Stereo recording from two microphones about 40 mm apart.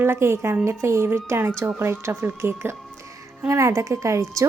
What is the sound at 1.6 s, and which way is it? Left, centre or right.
Speech, right.